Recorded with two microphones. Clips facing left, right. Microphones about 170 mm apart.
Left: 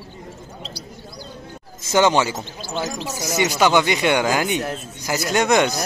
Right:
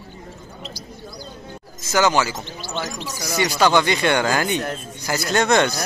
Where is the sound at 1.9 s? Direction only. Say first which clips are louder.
Left 2 dB; 25° left (ahead or behind).